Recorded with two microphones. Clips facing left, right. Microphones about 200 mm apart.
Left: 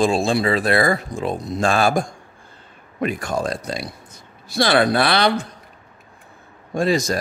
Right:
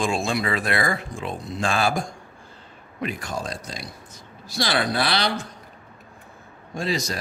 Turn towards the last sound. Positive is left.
turn(degrees=50)  # may be behind; listen again after turning